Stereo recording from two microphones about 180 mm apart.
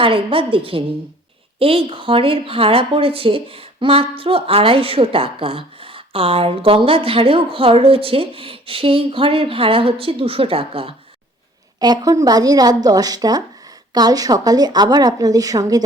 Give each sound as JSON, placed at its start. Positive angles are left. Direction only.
{"t": 0.0, "sound": "a woman's voice", "side_deg": -30}